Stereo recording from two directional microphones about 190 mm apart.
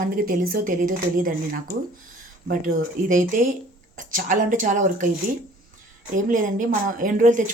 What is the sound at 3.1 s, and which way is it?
Speech, 45° right (ahead or behind).